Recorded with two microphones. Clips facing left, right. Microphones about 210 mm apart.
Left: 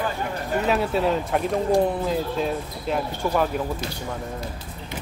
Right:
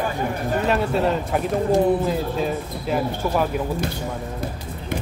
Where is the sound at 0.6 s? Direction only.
Centre (ahead or behind).